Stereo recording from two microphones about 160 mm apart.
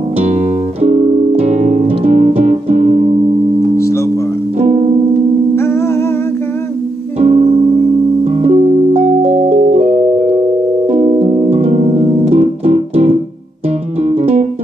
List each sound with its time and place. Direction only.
0.2 s music: 40° right (ahead or behind)
3.7 s music: 20° left (ahead or behind)
4.6 s music: 40° right (ahead or behind)
5.6 s music: 15° left (ahead or behind)
7.2 s music: 40° right (ahead or behind)